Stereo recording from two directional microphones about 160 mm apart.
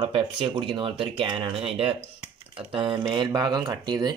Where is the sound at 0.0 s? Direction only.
30° right (ahead or behind).